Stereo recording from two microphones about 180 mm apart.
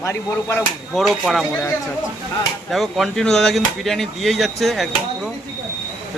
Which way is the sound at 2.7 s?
Centre (ahead or behind).